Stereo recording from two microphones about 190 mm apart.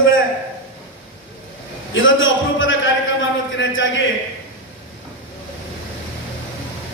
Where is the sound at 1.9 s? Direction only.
90° left.